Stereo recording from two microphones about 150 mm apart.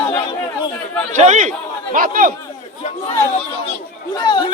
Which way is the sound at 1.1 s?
50° right (ahead or behind).